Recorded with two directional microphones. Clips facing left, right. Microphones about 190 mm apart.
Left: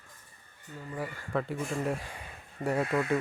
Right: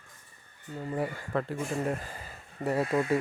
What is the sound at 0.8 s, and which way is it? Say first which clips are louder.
Speech: right 6 dB; 25° right (ahead or behind).